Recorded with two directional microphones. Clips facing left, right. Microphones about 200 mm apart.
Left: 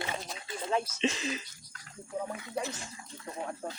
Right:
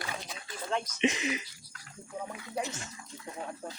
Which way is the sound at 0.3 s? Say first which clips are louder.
Left 3 dB; 25° left (ahead or behind).